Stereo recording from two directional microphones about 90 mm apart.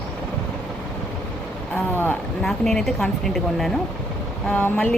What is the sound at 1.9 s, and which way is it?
Speech, 20° left (ahead or behind).